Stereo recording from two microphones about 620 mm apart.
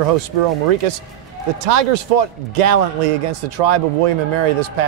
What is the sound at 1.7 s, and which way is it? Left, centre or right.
A man's voice, right.